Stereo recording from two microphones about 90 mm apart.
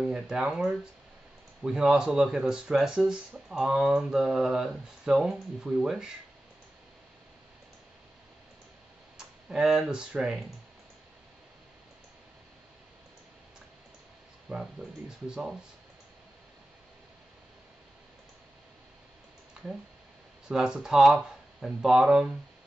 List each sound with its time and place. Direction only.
0.0 s speech: 5° right (ahead or behind)
9.1 s speech: 5° right (ahead or behind)
14.5 s speech: 10° right (ahead or behind)
20.4 s speech: 10° right (ahead or behind)